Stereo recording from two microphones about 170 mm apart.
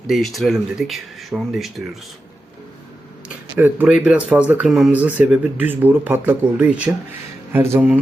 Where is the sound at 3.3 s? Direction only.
10° right (ahead or behind).